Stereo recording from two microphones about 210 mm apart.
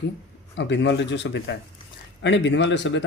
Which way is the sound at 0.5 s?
60° left (ahead or behind).